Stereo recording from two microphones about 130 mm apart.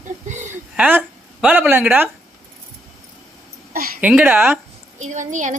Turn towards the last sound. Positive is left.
turn(degrees=-70)  # may be behind; listen again after turning